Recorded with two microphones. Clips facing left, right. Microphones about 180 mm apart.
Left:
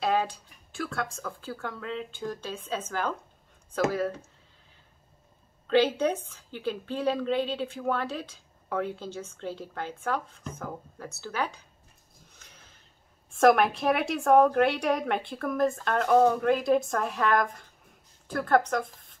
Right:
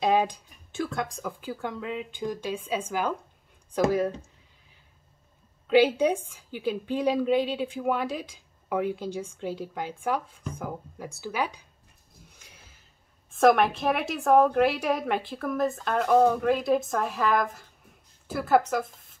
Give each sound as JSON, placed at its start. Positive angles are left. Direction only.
{"t": 0.0, "sound": "a woman's voice", "side_deg": -15}
{"t": 5.7, "sound": "a woman's voice", "side_deg": -10}
{"t": 12.4, "sound": "a sound", "side_deg": -10}
{"t": 13.3, "sound": "a woman's voice", "side_deg": 0}